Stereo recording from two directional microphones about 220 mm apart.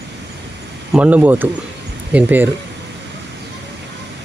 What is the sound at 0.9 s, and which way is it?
Speech, 5° right (ahead or behind).